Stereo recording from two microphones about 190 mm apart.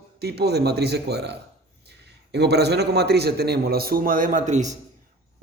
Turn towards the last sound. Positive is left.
turn(degrees=-40)  # may be behind; listen again after turning